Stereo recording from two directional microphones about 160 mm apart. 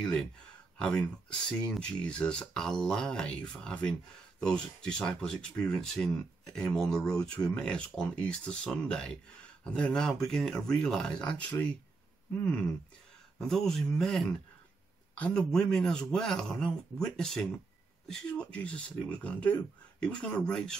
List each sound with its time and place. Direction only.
0.0 s speech: 5° left (ahead or behind)
13.4 s speech: 5° left (ahead or behind)